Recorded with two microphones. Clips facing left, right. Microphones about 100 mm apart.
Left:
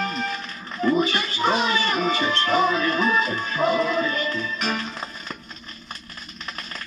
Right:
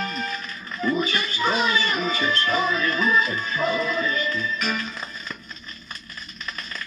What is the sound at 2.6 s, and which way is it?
Music, 40° left (ahead or behind).